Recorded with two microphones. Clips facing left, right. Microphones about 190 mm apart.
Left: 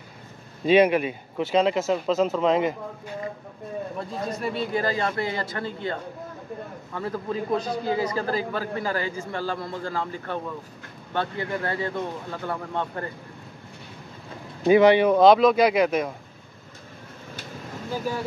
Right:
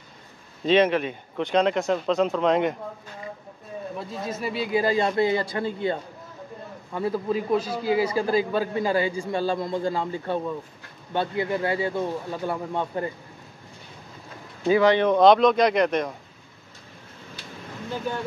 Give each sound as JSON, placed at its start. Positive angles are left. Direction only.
{"t": 0.7, "sound": "speech", "side_deg": 10}
{"t": 4.3, "sound": "speech", "side_deg": -5}
{"t": 4.8, "sound": "a man's voice", "side_deg": -15}
{"t": 14.7, "sound": "speech", "side_deg": 15}
{"t": 17.9, "sound": "speech", "side_deg": 5}